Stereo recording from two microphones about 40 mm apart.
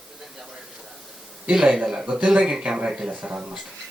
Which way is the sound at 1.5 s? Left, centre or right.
Centre.